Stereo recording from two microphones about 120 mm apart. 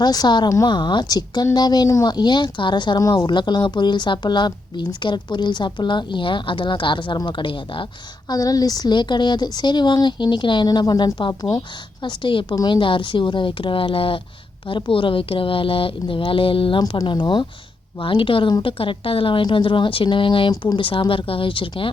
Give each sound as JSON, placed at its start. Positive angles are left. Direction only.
{"t": 0.0, "sound": "speech", "side_deg": 35}
{"t": 8.3, "sound": "a woman's voice", "side_deg": 30}